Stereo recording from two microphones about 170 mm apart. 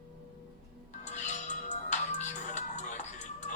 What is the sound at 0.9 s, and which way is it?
Music, 45° left (ahead or behind).